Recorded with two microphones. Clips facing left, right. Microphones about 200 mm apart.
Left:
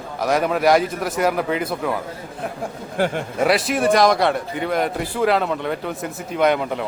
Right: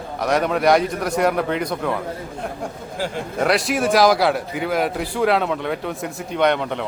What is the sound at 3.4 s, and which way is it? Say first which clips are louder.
A man's voice: left 1 dB; centre (ahead or behind).